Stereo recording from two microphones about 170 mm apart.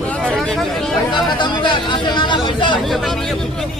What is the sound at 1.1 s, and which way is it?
Speech, 30° left (ahead or behind).